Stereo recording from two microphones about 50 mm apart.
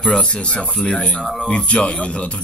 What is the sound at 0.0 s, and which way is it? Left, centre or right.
Speech, centre.